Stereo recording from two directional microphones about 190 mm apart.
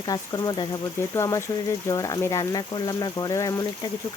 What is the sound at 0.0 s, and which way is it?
Speech, 20° left (ahead or behind).